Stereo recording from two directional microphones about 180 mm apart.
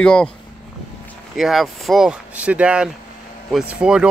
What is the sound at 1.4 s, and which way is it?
Speech, centre (ahead or behind).